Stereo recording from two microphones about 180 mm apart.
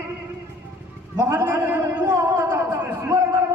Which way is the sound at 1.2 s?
20° right (ahead or behind).